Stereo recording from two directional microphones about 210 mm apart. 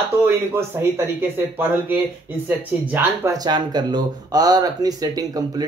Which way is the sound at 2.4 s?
10° right (ahead or behind).